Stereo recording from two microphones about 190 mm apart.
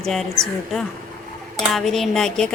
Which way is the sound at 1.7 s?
Centre (ahead or behind).